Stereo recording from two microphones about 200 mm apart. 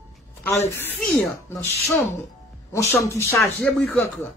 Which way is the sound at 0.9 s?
10° left (ahead or behind).